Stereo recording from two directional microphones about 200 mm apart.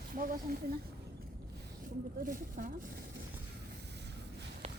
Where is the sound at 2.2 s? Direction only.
45° right (ahead or behind).